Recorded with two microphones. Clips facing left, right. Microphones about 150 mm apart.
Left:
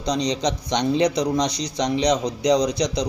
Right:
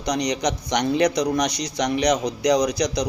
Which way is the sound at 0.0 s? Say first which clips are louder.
Even; 25° left (ahead or behind).